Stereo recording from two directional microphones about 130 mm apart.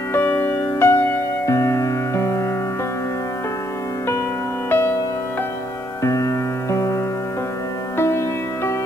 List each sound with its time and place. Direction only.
0.1 s music: 15° left (ahead or behind)
4.6 s music: 15° left (ahead or behind)
6.0 s music: 25° left (ahead or behind)
8.0 s music: 20° left (ahead or behind)